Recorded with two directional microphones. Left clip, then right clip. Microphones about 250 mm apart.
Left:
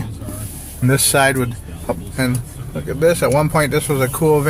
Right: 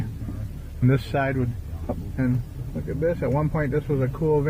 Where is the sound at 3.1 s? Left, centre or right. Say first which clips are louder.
Left 11 dB; centre.